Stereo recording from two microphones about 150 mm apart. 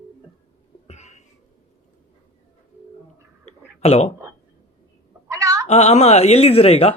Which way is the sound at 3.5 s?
45° left (ahead or behind).